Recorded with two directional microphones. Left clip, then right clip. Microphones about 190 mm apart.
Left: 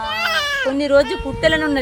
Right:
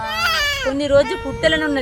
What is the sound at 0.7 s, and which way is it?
A woman's voice, 10° left (ahead or behind).